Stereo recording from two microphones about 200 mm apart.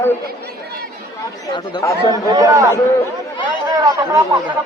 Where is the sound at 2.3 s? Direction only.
20° right (ahead or behind).